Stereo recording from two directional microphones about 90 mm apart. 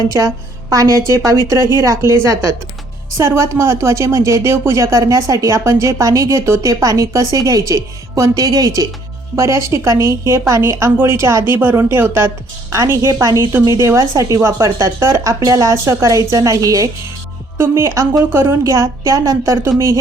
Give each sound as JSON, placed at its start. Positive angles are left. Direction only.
{"t": 0.7, "sound": "a woman's voice", "side_deg": -40}
{"t": 3.2, "sound": "a woman's voice", "side_deg": -30}
{"t": 18.6, "sound": "a woman's voice", "side_deg": -35}